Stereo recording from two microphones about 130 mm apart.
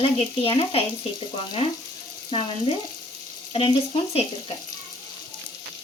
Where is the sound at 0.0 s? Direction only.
45° left (ahead or behind).